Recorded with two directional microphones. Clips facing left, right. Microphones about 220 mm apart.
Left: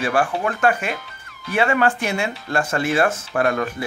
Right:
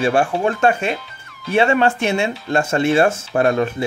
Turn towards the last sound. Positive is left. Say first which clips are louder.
# right 4 dB
turn(degrees=-25)  # may be behind; listen again after turning